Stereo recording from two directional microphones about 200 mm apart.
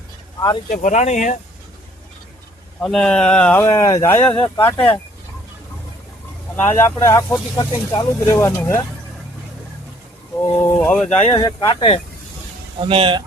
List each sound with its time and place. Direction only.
0.3 s speech: 20° left (ahead or behind)
0.7 s speech: 40° left (ahead or behind)
2.8 s speech: 5° left (ahead or behind)
6.7 s speech: 10° left (ahead or behind)
10.5 s speech: 5° left (ahead or behind)
11.3 s speech: 25° left (ahead or behind)
12.8 s speech: 25° right (ahead or behind)